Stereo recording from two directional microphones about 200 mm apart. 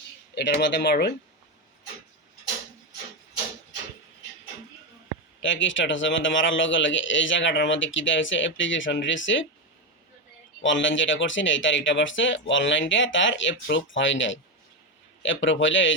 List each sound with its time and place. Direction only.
0.3 s speech: 60° left (ahead or behind)
5.4 s a man's voice: 70° left (ahead or behind)
10.6 s a man's voice: 70° left (ahead or behind)